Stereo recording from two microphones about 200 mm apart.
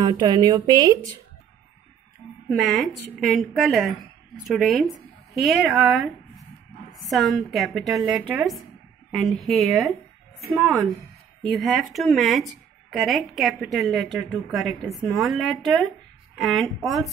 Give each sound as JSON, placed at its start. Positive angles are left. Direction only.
{"t": 0.0, "sound": "speech", "side_deg": -20}
{"t": 2.6, "sound": "a woman's voice", "side_deg": 0}